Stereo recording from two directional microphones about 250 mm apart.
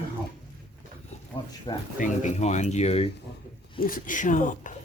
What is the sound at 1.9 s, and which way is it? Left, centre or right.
Speech, left.